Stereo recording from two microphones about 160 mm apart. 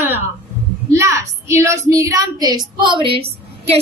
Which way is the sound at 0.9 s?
20° right (ahead or behind).